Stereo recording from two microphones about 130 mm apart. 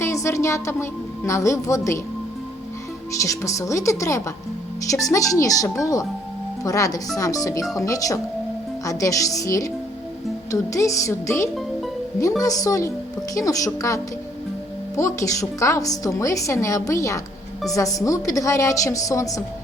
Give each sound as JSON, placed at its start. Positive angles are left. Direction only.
{"t": 0.0, "sound": "speech", "side_deg": 20}
{"t": 3.2, "sound": "a woman's voice", "side_deg": 25}